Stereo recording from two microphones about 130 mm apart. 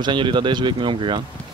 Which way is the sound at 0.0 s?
40° right (ahead or behind).